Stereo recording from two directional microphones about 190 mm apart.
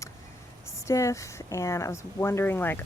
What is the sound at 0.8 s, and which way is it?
Speech, 15° left (ahead or behind).